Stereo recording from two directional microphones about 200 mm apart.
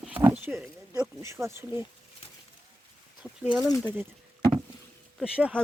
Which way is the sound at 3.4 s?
5° right (ahead or behind).